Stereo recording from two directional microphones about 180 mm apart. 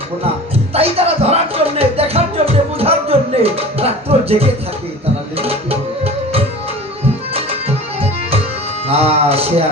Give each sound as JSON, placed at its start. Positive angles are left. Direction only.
{"t": 0.7, "sound": "music", "side_deg": -35}
{"t": 8.9, "sound": "a man's voice", "side_deg": -35}